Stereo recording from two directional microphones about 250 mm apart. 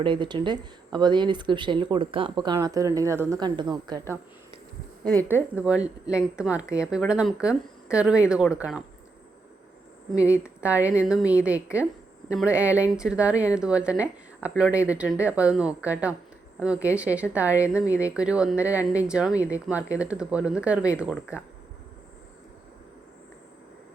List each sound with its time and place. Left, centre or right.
0.0 s speech: centre
10.2 s speech: centre